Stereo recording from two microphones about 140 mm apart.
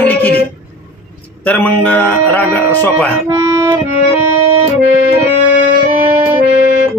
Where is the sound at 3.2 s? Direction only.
20° right (ahead or behind).